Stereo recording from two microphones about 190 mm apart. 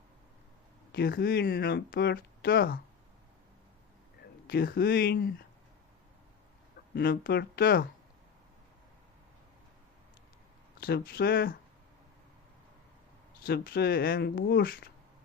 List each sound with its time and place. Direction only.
0.9 s speech: 55° left (ahead or behind)
4.4 s speech: 55° left (ahead or behind)
6.9 s speech: 55° left (ahead or behind)
10.8 s speech: 50° left (ahead or behind)
13.4 s speech: 55° left (ahead or behind)